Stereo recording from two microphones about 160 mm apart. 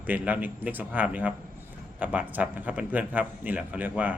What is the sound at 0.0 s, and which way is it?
A man's voice, 10° right (ahead or behind).